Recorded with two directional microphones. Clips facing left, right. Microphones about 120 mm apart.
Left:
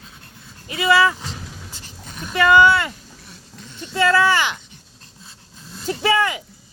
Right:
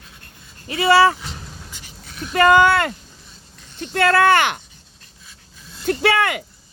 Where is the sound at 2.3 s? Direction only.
50° right (ahead or behind).